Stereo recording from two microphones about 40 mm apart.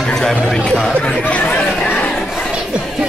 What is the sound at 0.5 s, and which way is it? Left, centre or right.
Speech, centre.